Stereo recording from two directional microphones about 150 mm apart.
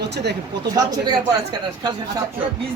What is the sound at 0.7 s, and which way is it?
Speech, 25° right (ahead or behind).